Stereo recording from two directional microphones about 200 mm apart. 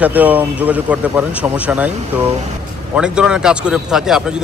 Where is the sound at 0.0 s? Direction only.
10° right (ahead or behind).